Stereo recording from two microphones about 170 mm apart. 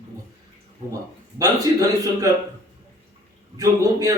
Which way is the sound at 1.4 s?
20° right (ahead or behind).